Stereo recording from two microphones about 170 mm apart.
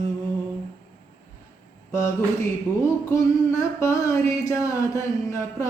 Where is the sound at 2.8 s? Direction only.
15° left (ahead or behind).